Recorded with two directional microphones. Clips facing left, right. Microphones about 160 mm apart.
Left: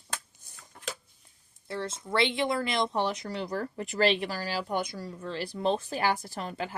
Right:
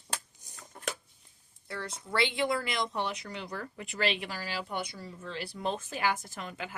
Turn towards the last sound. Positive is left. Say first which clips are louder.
# left 5 dB
turn(degrees=35)  # may be behind; listen again after turning